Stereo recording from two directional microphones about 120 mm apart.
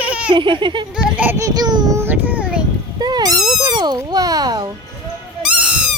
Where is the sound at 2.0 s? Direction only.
15° right (ahead or behind).